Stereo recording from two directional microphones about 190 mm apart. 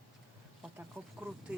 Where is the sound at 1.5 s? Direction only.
5° right (ahead or behind).